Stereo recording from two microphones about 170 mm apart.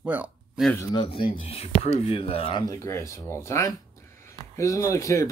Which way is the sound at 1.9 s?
35° left (ahead or behind).